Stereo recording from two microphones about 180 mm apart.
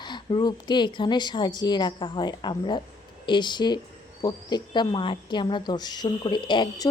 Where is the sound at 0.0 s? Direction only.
25° left (ahead or behind).